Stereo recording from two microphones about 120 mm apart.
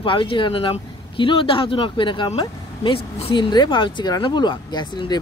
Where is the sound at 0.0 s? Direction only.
45° left (ahead or behind).